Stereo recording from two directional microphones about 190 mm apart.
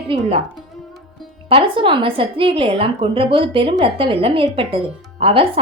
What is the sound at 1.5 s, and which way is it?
A woman's voice, 25° right (ahead or behind).